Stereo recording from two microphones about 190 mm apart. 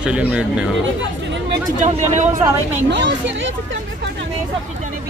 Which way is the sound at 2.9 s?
70° right (ahead or behind).